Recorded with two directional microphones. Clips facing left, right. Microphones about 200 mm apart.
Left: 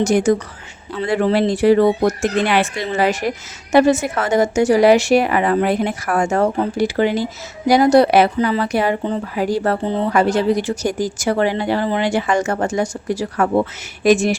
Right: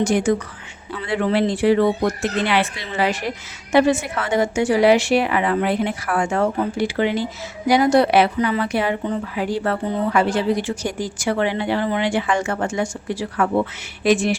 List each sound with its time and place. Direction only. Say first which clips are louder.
0.0 s speech: left 3 dB; 40° left (ahead or behind)
10.1 s speech: left 3 dB; 40° left (ahead or behind)